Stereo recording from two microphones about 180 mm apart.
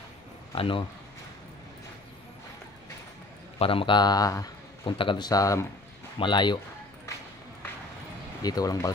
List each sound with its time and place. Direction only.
0.6 s a man's voice: 30° left (ahead or behind)
3.5 s a man's voice: 30° left (ahead or behind)
8.4 s a man's voice: 20° left (ahead or behind)